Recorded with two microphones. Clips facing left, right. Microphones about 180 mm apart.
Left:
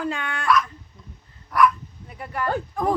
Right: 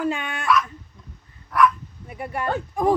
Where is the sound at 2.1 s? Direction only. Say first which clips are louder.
Right 1 dB; 25° right (ahead or behind).